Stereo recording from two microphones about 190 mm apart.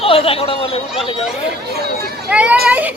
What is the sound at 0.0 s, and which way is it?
Speech, 30° left (ahead or behind).